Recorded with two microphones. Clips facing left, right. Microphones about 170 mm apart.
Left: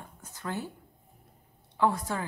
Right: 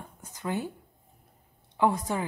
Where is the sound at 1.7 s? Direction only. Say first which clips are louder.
Right 2 dB; 15° right (ahead or behind).